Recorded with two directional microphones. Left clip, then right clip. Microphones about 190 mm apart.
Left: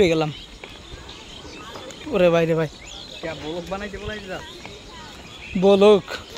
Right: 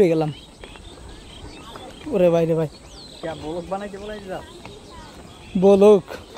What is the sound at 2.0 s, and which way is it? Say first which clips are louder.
Speech: even; 20° right (ahead or behind).